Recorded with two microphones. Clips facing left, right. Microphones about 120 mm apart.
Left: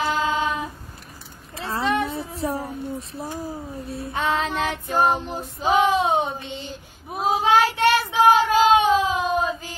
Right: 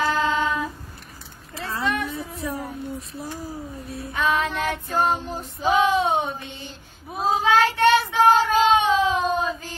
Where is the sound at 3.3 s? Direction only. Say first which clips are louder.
Left 2 dB; 25° left (ahead or behind).